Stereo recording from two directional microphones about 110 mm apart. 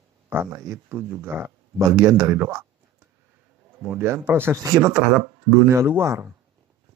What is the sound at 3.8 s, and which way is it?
Speech, 20° right (ahead or behind).